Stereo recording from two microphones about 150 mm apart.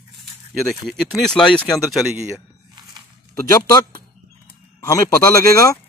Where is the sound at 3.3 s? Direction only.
25° left (ahead or behind).